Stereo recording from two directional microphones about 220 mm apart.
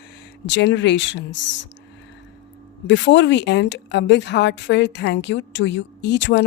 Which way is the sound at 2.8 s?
55° left (ahead or behind).